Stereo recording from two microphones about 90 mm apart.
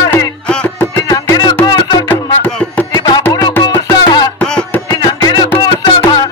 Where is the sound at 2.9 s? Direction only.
55° left (ahead or behind).